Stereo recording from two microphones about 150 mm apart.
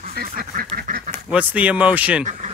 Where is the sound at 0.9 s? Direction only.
60° right (ahead or behind).